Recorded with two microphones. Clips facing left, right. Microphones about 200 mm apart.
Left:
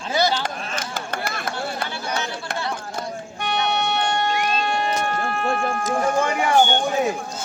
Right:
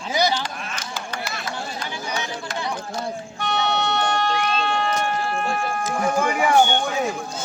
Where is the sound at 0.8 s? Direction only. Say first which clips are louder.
Left 4 dB; 55° left (ahead or behind).